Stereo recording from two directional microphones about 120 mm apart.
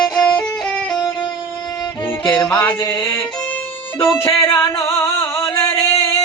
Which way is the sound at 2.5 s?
10° left (ahead or behind).